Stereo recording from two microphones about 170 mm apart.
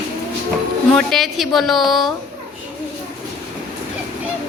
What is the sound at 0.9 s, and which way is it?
A woman's voice, centre (ahead or behind).